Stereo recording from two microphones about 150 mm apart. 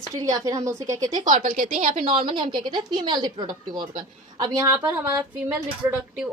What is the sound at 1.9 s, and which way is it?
A woman's voice, 35° right (ahead or behind).